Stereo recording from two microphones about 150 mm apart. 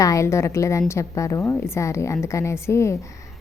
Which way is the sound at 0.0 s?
20° left (ahead or behind).